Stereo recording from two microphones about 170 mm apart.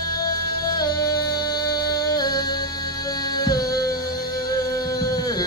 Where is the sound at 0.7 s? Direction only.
25° left (ahead or behind).